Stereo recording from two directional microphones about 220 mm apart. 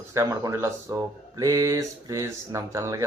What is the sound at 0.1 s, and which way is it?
Speech, 15° right (ahead or behind).